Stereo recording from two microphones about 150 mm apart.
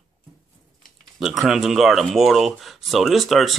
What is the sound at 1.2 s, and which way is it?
Speech, centre (ahead or behind).